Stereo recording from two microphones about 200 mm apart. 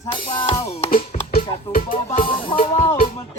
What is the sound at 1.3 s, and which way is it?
Music, 45° left (ahead or behind).